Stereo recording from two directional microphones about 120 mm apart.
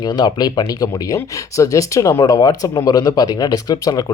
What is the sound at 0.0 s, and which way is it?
Speech, 35° left (ahead or behind).